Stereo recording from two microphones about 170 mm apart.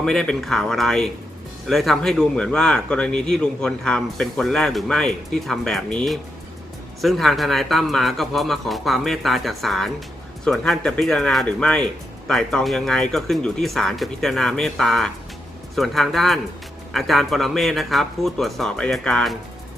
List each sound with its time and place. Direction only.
0.0 s speech: 5° left (ahead or behind)